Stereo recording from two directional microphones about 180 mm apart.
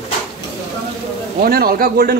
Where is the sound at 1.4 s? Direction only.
55° right (ahead or behind).